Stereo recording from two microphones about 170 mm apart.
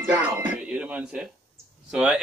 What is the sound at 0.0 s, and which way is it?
Speech, 10° right (ahead or behind).